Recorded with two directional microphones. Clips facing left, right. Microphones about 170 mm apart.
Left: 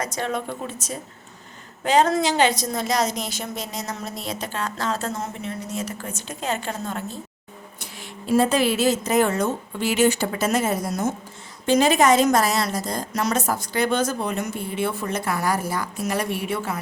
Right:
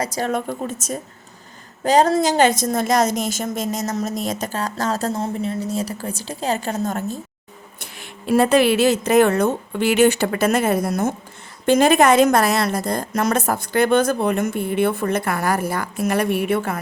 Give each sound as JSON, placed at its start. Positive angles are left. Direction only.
{"t": 0.2, "sound": "a woman's voice", "side_deg": -45}
{"t": 7.8, "sound": "a woman's voice", "side_deg": -60}